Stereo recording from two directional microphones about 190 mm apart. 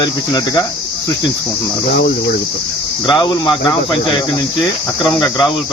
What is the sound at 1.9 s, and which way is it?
Speech, 65° left (ahead or behind).